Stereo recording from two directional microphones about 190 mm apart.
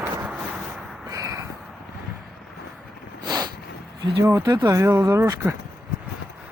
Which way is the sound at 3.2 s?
20° right (ahead or behind).